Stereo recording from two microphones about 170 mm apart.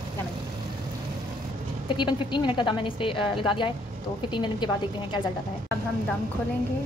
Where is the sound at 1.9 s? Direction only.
25° left (ahead or behind).